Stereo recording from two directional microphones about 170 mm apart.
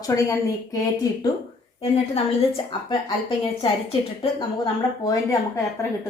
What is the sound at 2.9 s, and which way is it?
Speech, 25° left (ahead or behind).